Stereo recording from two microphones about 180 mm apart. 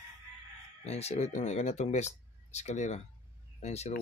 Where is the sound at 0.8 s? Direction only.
35° left (ahead or behind).